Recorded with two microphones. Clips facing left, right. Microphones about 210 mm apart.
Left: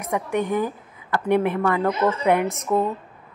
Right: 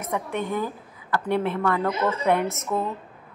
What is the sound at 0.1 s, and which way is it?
A woman's voice, 15° left (ahead or behind).